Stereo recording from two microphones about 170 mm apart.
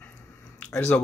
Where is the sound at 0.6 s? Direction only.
10° left (ahead or behind).